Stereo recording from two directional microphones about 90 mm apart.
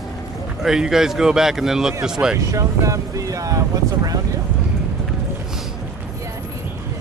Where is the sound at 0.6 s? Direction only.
5° right (ahead or behind).